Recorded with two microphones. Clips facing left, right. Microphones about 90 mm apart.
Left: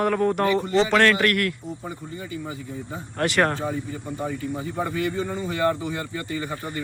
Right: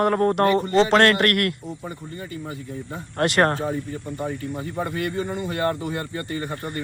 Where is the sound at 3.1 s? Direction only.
45° right (ahead or behind).